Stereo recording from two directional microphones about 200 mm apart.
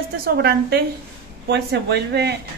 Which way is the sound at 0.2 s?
50° right (ahead or behind).